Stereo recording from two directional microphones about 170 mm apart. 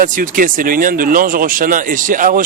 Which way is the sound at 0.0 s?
55° right (ahead or behind).